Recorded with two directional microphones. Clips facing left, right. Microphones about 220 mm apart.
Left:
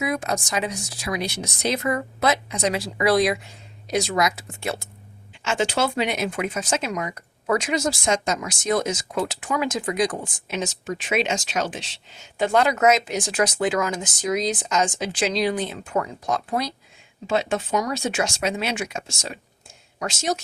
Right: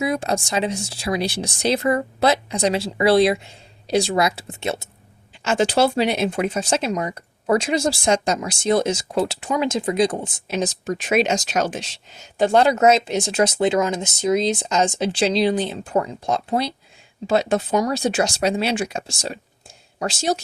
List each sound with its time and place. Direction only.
0.0 s speech: 30° right (ahead or behind)
5.4 s speech: 40° right (ahead or behind)
10.5 s speech: 40° right (ahead or behind)